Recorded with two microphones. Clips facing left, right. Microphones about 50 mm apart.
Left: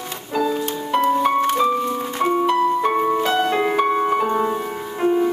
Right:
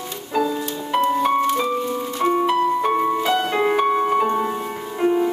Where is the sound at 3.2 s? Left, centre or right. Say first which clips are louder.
Left 1 dB; centre.